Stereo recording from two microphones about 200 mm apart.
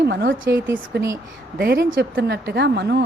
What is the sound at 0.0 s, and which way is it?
A woman's voice, 55° right (ahead or behind).